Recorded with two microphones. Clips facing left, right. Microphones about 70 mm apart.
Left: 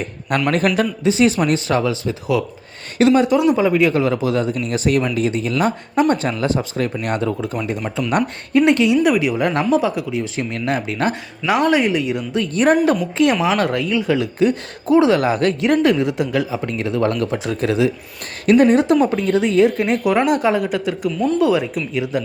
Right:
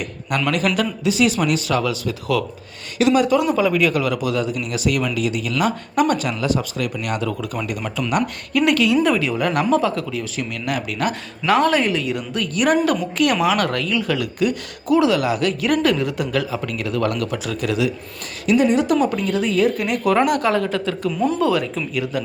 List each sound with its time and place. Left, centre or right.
0.0 s a woman's voice: left
9.0 s a woman's voice: centre; by 11.1 s left
11.4 s a woman's voice: centre; by 15.5 s left
15.6 s a woman's voice: left
18.4 s speech: left
19.0 s a woman's voice: left
21.1 s speech: centre
21.9 s a woman's voice: left